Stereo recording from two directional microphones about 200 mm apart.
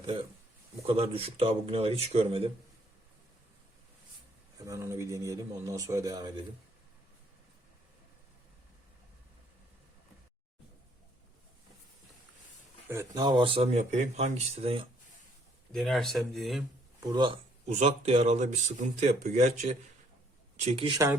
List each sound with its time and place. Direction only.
0.0 s speech: 25° right (ahead or behind)
4.6 s speech: 15° right (ahead or behind)
12.9 s speech: 15° right (ahead or behind)
15.7 s speech: centre (ahead or behind)
17.1 s speech: 25° right (ahead or behind)
20.7 s speech: 25° right (ahead or behind)